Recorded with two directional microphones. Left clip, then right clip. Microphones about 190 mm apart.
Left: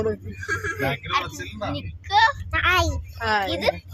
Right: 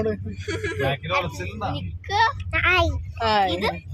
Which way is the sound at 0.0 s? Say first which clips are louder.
Even; 10° right (ahead or behind).